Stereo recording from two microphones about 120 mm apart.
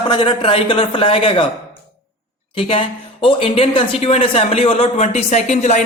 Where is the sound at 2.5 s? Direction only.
50° left (ahead or behind).